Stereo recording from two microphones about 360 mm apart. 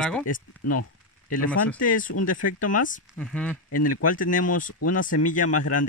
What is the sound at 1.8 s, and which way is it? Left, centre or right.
Speech, left.